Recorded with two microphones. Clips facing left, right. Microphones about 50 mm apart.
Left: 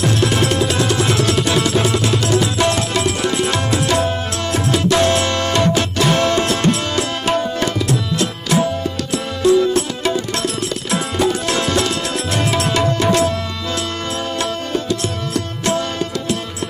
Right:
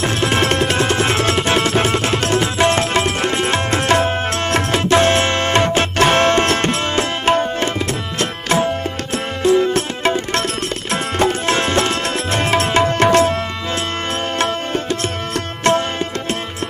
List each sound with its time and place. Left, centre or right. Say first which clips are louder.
0.0 s music: even; right
4.6 s tabla: even; right
14.4 s music: right 2 dB; right